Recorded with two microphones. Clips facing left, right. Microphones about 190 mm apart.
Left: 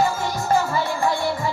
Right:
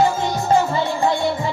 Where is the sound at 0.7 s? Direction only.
20° right (ahead or behind).